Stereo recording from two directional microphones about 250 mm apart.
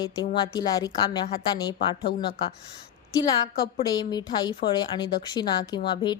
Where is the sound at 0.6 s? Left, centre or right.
Centre.